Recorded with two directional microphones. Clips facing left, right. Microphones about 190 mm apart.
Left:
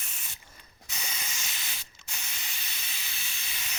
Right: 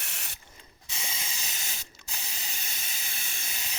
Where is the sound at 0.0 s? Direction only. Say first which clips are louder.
Right 4 dB; 75° right (ahead or behind).